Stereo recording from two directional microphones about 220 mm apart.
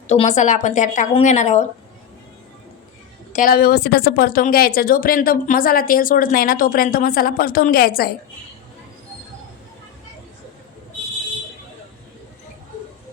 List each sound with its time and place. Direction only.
0.1 s a woman's voice: 30° left (ahead or behind)
3.3 s a woman's voice: 40° left (ahead or behind)